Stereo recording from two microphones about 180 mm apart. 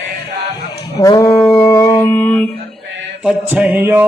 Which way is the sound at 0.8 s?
20° left (ahead or behind).